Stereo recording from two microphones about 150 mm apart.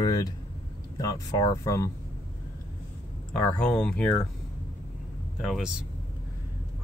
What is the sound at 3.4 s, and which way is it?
Speech, 10° left (ahead or behind).